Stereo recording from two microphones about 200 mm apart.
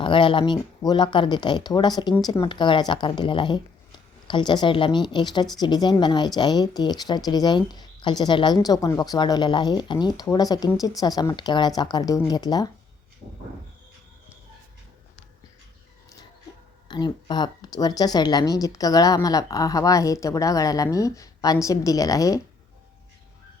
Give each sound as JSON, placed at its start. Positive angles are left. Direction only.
{"t": 0.0, "sound": "speech", "side_deg": 25}
{"t": 16.9, "sound": "speech", "side_deg": 20}